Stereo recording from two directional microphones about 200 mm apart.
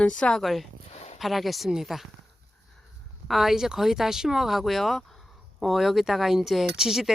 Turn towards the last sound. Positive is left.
turn(degrees=0)  # may be behind; listen again after turning